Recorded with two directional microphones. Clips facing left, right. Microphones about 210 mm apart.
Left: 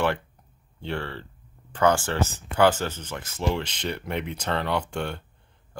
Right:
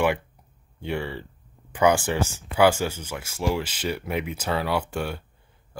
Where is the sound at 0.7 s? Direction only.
10° right (ahead or behind).